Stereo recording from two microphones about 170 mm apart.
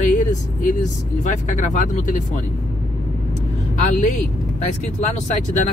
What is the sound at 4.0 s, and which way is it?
Speech, 45° left (ahead or behind).